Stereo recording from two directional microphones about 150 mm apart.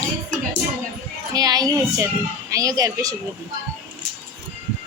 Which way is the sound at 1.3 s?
25° right (ahead or behind).